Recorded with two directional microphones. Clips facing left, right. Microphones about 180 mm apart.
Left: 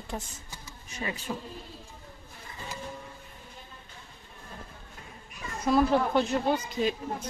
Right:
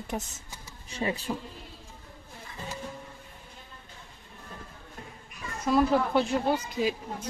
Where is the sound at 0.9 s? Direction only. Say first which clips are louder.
Right 4 dB; 30° right (ahead or behind).